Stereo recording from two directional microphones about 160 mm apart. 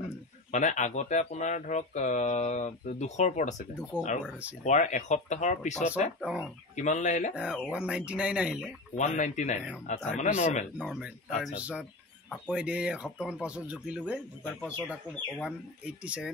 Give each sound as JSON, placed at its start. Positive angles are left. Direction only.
{"t": 0.5, "sound": "speech", "side_deg": 50}
{"t": 4.2, "sound": "speech", "side_deg": -10}
{"t": 4.6, "sound": "speech", "side_deg": 50}
{"t": 7.3, "sound": "speech", "side_deg": -5}
{"t": 8.9, "sound": "speech", "side_deg": 50}
{"t": 10.8, "sound": "speech", "side_deg": 0}
{"t": 14.4, "sound": "speech", "side_deg": 10}
{"t": 15.4, "sound": "speech", "side_deg": -5}